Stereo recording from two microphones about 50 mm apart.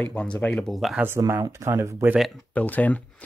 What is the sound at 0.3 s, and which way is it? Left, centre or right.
Speech, left.